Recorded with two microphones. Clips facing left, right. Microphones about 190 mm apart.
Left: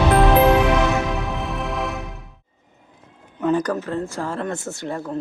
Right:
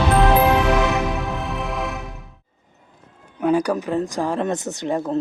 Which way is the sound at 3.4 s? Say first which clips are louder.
Right 2 dB; 10° right (ahead or behind).